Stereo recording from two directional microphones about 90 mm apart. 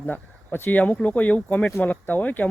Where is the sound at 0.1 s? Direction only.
20° left (ahead or behind).